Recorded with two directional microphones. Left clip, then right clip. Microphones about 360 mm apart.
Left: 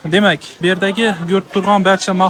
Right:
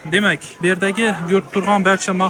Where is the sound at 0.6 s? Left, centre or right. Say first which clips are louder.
Left 2 dB; centre.